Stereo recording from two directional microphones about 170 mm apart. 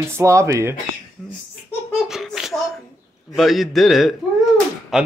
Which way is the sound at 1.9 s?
Centre (ahead or behind).